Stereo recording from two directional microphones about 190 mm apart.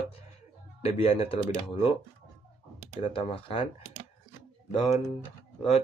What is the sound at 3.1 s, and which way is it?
Speech, 30° left (ahead or behind).